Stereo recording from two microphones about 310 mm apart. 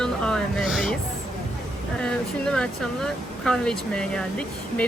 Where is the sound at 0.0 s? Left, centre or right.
Centre.